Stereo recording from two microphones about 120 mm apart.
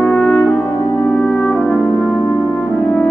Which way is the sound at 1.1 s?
10° left (ahead or behind).